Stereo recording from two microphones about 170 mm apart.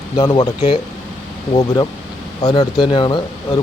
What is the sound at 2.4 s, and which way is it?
Speech, 25° left (ahead or behind).